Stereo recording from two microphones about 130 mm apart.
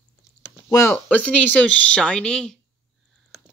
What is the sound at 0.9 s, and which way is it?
Speech, 10° left (ahead or behind).